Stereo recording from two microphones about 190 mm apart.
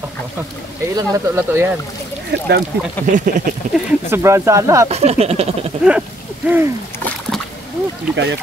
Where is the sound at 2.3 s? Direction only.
60° right (ahead or behind).